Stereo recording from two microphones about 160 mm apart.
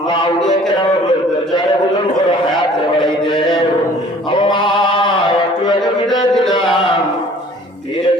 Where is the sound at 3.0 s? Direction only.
30° left (ahead or behind).